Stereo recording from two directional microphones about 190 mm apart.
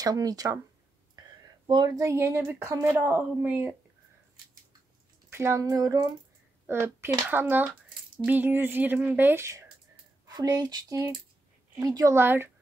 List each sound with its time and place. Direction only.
0.0 s speech: 20° right (ahead or behind)
1.7 s speech: 20° right (ahead or behind)
5.3 s speech: 15° right (ahead or behind)